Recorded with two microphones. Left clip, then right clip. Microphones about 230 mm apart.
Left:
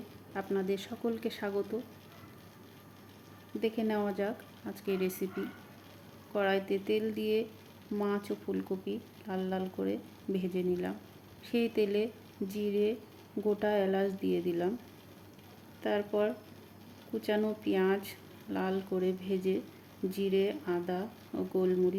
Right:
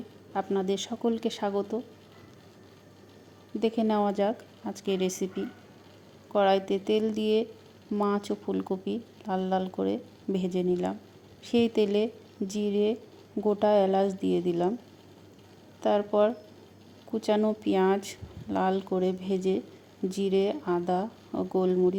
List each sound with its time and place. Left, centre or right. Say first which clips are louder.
0.3 s speech: right 5 dB; right
3.6 s speech: right 6 dB; right
6.3 s speech: right 7 dB; right
15.8 s speech: right 7 dB; right